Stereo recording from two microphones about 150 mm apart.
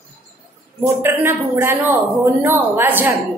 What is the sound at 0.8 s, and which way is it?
A woman's voice, 15° right (ahead or behind).